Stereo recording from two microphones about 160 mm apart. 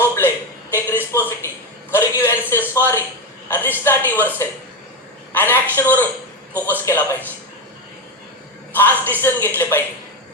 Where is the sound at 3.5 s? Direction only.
15° left (ahead or behind).